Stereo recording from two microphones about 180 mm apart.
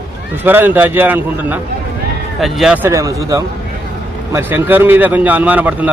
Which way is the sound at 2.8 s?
20° right (ahead or behind).